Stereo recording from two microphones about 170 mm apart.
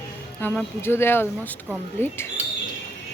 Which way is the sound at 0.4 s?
10° left (ahead or behind).